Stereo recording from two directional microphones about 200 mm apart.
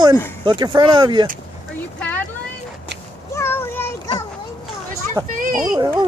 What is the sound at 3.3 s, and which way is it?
Child singing, 10° left (ahead or behind).